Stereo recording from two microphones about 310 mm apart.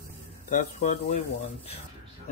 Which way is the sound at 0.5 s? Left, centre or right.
Left.